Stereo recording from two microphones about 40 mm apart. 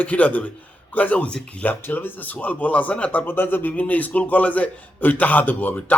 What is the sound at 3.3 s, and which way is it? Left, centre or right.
Speech, left.